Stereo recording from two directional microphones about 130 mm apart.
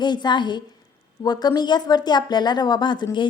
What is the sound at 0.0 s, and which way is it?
A woman's voice, 35° left (ahead or behind).